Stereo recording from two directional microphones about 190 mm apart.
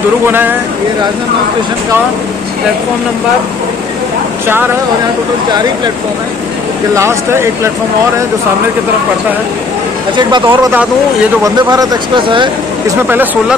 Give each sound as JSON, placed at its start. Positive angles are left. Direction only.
{"t": 7.0, "sound": "speech", "side_deg": -15}
{"t": 10.1, "sound": "speech", "side_deg": -25}
{"t": 13.1, "sound": "speech", "side_deg": -10}